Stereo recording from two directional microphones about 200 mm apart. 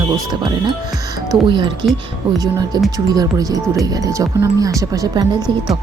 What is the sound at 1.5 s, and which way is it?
Speech, 25° right (ahead or behind).